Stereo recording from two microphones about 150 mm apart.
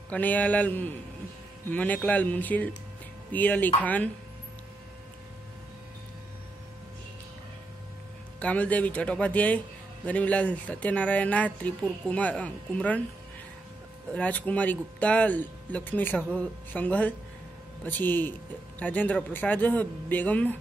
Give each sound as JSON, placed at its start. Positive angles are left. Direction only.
{"t": 0.1, "sound": "speech", "side_deg": 10}
{"t": 8.4, "sound": "speech", "side_deg": 10}
{"t": 14.1, "sound": "speech", "side_deg": 10}